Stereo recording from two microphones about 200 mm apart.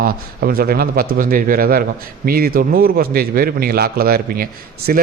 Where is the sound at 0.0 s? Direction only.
45° right (ahead or behind).